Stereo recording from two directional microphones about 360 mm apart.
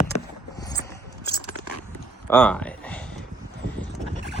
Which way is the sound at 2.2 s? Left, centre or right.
Centre.